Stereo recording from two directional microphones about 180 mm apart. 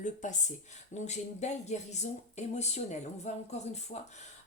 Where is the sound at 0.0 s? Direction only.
45° left (ahead or behind).